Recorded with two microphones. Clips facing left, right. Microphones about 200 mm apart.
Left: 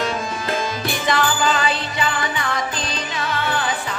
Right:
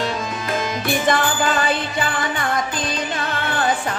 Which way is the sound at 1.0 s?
50° right (ahead or behind).